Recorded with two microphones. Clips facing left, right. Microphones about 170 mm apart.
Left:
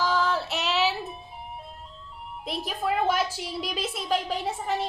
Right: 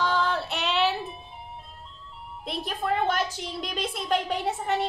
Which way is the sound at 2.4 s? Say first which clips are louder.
Left 1 dB; centre (ahead or behind).